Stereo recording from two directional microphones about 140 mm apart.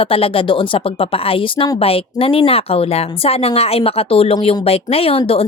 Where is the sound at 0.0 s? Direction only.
40° left (ahead or behind).